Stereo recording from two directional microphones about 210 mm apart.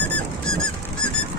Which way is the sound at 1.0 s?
60° right (ahead or behind).